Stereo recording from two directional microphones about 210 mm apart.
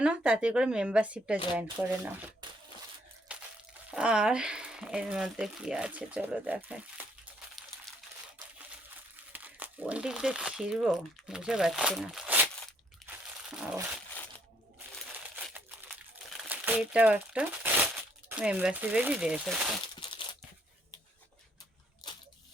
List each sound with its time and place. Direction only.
0.0 s speech: 5° right (ahead or behind)
3.3 s crunch: 5° right (ahead or behind)
3.9 s speech: 5° right (ahead or behind)
9.3 s speech: 10° right (ahead or behind)
13.1 s crunch: 5° right (ahead or behind)
13.7 s speech: 5° right (ahead or behind)
15.4 s crumpling: 5° right (ahead or behind)
16.4 s speech: 10° right (ahead or behind)
20.0 s a sound: 25° left (ahead or behind)